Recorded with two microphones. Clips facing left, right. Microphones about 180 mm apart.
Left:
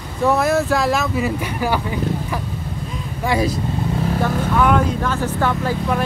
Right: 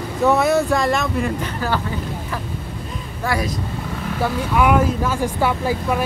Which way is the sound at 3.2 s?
25° left (ahead or behind).